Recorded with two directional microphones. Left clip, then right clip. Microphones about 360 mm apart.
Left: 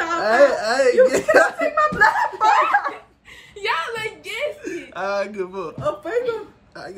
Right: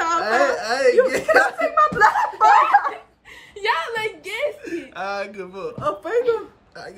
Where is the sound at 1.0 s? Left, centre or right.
Centre.